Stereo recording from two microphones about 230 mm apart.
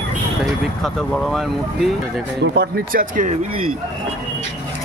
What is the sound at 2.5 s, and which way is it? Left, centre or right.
Speech, right.